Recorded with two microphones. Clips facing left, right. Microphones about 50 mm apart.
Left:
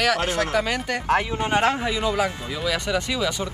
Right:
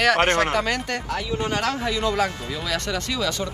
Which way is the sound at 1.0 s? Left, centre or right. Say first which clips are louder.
Left 5 dB; left.